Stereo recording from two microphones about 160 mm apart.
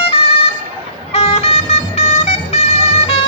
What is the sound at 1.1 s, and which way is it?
Vehicle, 40° left (ahead or behind).